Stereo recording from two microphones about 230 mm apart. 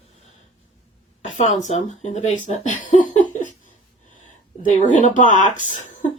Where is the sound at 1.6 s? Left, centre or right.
Left.